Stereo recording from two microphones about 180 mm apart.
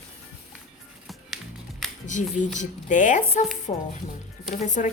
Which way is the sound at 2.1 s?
45° left (ahead or behind).